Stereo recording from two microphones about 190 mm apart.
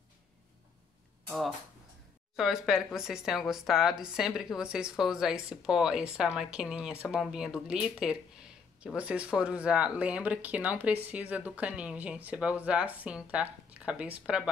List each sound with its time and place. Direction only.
2.3 s a woman's voice: centre (ahead or behind)